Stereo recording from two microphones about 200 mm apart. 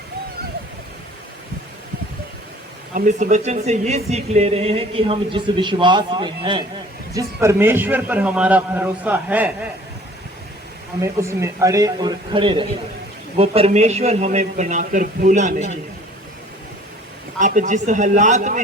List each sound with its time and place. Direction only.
2.9 s speech: 40° right (ahead or behind); by 6.7 s 25° right (ahead or behind)
7.3 s a man's voice: 10° right (ahead or behind)
11.0 s a man's voice: 15° right (ahead or behind); by 15.6 s 40° right (ahead or behind)
17.4 s speech: 40° right (ahead or behind)